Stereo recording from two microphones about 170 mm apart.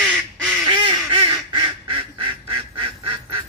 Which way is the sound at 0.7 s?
30° right (ahead or behind).